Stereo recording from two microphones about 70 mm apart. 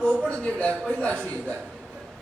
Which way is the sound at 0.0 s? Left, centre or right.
Centre.